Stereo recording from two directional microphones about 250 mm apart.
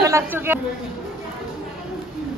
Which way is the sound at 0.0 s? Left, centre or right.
Centre.